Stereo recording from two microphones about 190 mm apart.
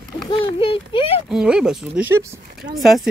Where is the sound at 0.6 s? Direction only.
30° left (ahead or behind).